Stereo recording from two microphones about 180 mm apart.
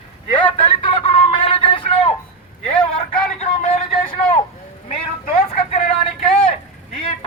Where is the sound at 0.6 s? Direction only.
30° left (ahead or behind).